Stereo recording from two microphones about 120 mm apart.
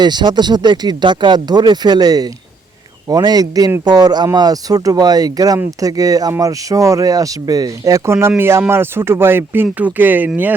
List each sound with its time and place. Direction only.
0.0 s speech: 40° right (ahead or behind); by 10.5 s 15° right (ahead or behind)